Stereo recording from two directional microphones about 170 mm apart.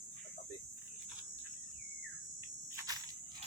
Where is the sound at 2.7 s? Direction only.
20° right (ahead or behind).